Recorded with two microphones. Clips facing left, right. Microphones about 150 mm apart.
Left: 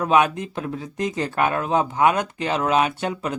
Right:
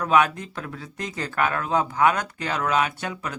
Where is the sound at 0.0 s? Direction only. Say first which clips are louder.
Left 2 dB; 25° left (ahead or behind).